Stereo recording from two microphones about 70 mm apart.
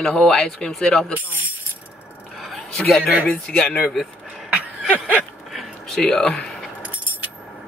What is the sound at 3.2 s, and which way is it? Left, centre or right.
Speech, centre.